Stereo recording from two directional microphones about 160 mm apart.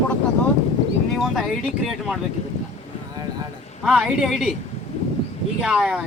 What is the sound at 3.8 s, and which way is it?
Speech, 5° right (ahead or behind).